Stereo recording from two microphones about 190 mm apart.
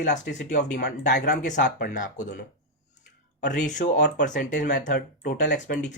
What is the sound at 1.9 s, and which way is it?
Speech, 40° left (ahead or behind).